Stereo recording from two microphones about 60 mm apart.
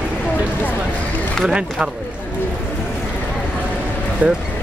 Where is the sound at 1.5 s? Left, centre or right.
Centre.